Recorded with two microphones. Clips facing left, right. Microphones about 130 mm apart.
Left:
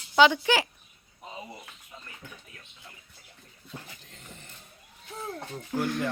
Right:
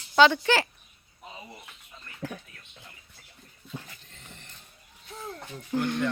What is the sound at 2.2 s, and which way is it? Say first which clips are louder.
Speech: right 15 dB; 90° right.